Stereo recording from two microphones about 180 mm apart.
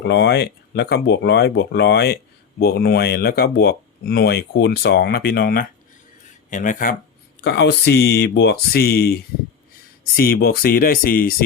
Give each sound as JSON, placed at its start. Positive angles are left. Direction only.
{"t": 0.0, "sound": "speech", "side_deg": 70}
{"t": 7.4, "sound": "speech", "side_deg": 70}